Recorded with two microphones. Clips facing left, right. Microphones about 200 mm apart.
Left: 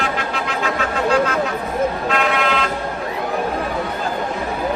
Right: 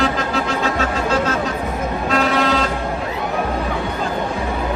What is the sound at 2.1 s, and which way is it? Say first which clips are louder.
Vehicle: right 2 dB; 35° right (ahead or behind).